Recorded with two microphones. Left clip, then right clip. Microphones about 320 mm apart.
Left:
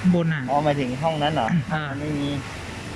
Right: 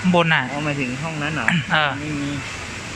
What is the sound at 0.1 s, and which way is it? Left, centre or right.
Speech, right.